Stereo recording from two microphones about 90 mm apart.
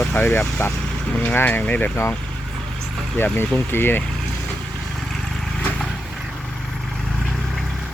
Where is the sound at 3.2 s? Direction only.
25° left (ahead or behind).